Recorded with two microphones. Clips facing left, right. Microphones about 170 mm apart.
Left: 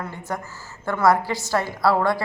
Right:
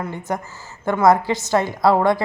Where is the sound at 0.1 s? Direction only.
20° right (ahead or behind).